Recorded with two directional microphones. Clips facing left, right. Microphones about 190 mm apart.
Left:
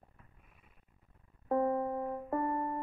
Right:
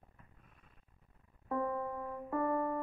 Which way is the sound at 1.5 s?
35° left (ahead or behind).